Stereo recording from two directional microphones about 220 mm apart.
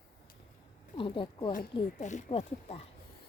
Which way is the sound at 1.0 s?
20° left (ahead or behind).